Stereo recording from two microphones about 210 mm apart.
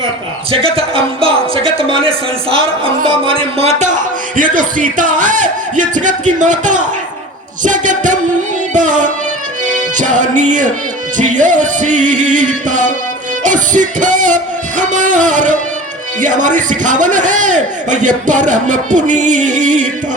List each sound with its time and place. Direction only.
0.5 s a man's voice: 25° right (ahead or behind)
8.7 s music: 35° right (ahead or behind)
11.2 s a man's voice: 35° right (ahead or behind)